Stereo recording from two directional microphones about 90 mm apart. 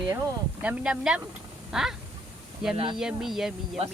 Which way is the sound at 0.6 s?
15° right (ahead or behind).